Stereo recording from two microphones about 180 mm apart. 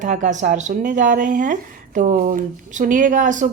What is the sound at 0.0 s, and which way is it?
Speech, 45° right (ahead or behind).